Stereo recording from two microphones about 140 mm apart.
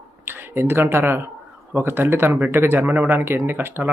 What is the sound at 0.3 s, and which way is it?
Speech, 15° right (ahead or behind).